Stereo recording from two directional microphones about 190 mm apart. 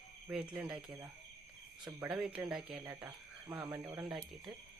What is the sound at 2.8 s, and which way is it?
Speech, 15° right (ahead or behind).